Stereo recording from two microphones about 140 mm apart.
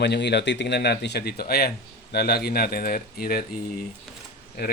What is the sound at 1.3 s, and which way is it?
Speech, 90° left.